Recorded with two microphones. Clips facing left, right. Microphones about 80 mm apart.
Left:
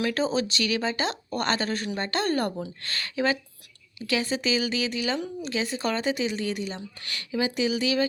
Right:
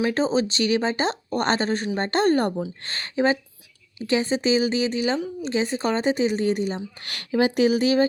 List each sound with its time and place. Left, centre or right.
0.0 s speech: right
7.0 s speech: right